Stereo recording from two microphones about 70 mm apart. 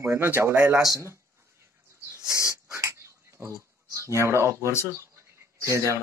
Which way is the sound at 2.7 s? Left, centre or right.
Right.